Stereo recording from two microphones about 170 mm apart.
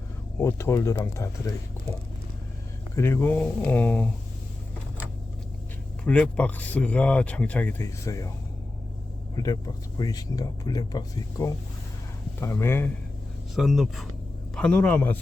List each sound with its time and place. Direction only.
0.3 s speech: 15° left (ahead or behind)
2.9 s speech: 15° left (ahead or behind)
6.1 s speech: 10° left (ahead or behind)
9.3 s speech: 20° left (ahead or behind)
13.6 s speech: centre (ahead or behind)